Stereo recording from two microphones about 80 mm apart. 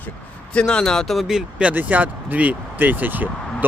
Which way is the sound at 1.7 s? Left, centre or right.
Right.